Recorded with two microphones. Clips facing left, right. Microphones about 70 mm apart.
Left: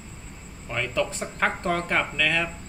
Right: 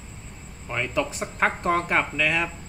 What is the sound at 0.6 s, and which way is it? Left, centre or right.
Speech, centre.